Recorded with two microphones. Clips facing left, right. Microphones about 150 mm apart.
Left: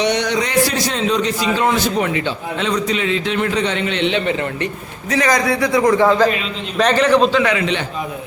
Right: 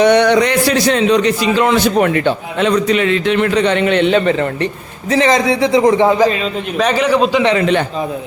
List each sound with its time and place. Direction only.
0.0 s a man's voice: 60° right (ahead or behind); by 4.7 s 40° right (ahead or behind)
5.1 s a man's voice: 25° right (ahead or behind); by 7.4 s 5° right (ahead or behind)
7.6 s a man's voice: 50° right (ahead or behind)